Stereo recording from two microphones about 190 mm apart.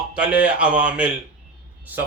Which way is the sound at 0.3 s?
5° right (ahead or behind).